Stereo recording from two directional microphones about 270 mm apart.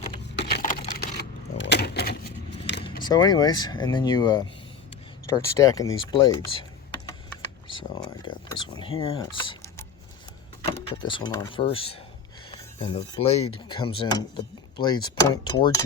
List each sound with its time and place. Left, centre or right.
0.3 s a sound: left
3.0 s speech: centre
7.7 s speech: centre